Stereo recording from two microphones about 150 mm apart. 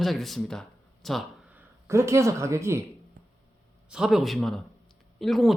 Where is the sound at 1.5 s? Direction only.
15° right (ahead or behind).